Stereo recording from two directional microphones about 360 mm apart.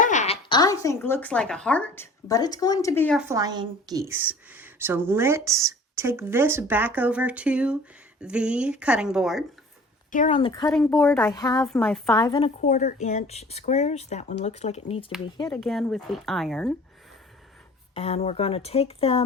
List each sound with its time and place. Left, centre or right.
0.0 s speech: centre
10.1 s speech: centre
17.9 s speech: centre